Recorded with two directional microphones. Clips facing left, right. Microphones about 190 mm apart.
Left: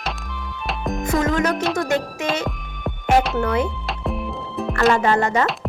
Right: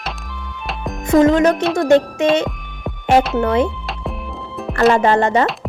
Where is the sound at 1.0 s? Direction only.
25° right (ahead or behind).